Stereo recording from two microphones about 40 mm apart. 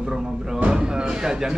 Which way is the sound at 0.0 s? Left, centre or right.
Centre.